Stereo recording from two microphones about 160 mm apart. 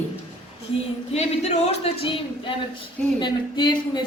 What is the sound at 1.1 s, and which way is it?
Speech, 45° left (ahead or behind).